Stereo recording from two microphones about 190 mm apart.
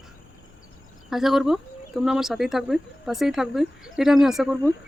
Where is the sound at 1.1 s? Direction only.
Centre (ahead or behind).